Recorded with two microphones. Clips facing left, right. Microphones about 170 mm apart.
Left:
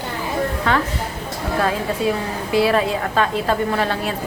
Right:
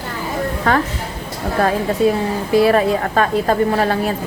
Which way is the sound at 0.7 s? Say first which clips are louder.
Right 4 dB; 45° right (ahead or behind).